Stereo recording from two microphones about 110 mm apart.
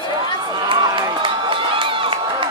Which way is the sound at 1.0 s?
45° right (ahead or behind).